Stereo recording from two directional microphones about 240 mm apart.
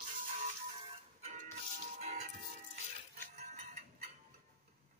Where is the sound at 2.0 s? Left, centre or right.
Right.